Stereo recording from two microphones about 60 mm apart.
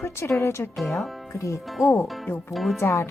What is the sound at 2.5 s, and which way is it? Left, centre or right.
Speech, centre.